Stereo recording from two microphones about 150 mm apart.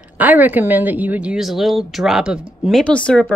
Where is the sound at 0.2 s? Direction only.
10° right (ahead or behind).